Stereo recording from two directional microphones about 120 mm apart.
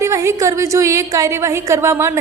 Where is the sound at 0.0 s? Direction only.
25° right (ahead or behind).